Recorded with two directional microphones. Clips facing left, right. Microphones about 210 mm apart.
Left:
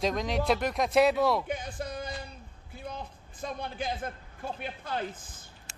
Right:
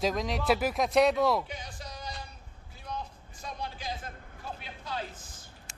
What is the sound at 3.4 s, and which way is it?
A man's voice, 55° left (ahead or behind).